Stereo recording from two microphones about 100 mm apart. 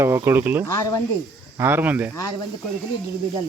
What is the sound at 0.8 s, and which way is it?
Speech, 35° left (ahead or behind).